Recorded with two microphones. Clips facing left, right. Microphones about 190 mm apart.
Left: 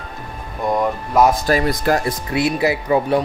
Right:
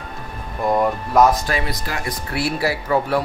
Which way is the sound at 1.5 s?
45° left (ahead or behind).